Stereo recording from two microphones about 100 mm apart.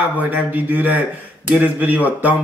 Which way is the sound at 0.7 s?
15° right (ahead or behind).